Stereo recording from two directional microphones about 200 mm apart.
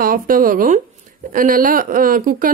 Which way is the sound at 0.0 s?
45° right (ahead or behind).